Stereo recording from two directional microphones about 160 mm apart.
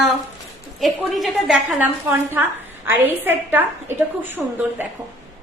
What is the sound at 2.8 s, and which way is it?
A woman's voice, 10° right (ahead or behind).